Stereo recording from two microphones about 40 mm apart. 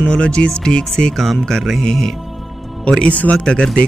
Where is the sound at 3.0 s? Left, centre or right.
Left.